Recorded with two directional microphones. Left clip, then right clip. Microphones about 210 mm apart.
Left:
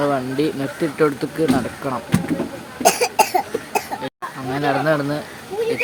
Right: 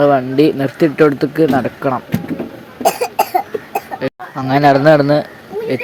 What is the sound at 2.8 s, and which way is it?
Cough, 10° left (ahead or behind).